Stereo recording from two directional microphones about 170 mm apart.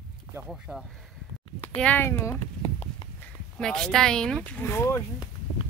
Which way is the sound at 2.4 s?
35° left (ahead or behind).